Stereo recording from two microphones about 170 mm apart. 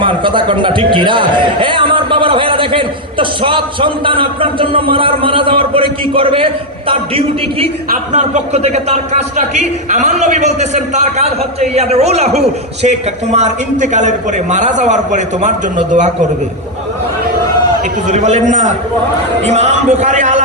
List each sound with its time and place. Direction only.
0.0 s a man's voice: 30° right (ahead or behind)
7.9 s speech: 45° right (ahead or behind)
18.1 s speech: 45° right (ahead or behind)